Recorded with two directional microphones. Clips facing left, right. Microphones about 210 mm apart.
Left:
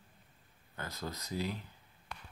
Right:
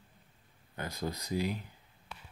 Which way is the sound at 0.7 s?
15° right (ahead or behind).